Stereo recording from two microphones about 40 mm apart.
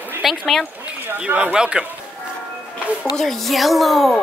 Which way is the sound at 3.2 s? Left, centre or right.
Centre.